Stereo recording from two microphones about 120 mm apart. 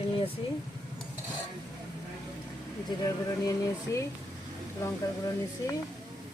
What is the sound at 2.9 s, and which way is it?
Speech, 30° left (ahead or behind).